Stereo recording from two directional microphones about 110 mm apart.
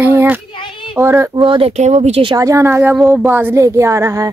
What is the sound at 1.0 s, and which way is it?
Speech, 25° right (ahead or behind).